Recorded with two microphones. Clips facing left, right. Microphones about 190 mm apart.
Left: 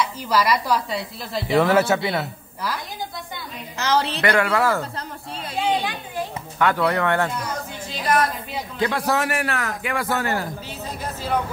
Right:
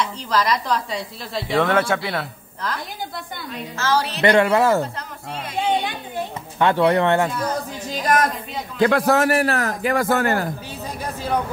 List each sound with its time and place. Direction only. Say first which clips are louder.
0.0 s speech: left 1 dB; 10° left (ahead or behind)
3.7 s a woman's voice: even; 20° left (ahead or behind)
4.2 s speech: right 8 dB; 25° right (ahead or behind)
6.6 s speech: right 4 dB; 25° right (ahead or behind)
7.9 s a man's voice: right 2 dB; 45° right (ahead or behind)
8.7 s a man's voice: right 6 dB; 55° right (ahead or behind)